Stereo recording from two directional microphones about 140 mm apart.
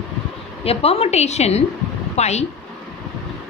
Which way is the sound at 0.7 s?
45° left (ahead or behind).